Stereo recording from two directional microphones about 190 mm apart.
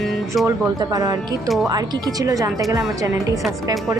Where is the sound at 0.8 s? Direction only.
20° right (ahead or behind).